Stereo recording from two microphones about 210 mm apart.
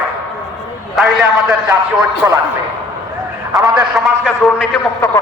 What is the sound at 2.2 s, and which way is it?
Speech, 10° right (ahead or behind).